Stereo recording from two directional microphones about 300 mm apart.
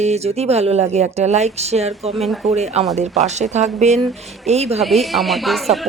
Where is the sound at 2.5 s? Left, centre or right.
Right.